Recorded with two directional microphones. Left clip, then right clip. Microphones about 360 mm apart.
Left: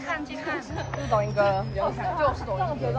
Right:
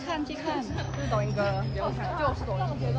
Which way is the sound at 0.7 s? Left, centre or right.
Left.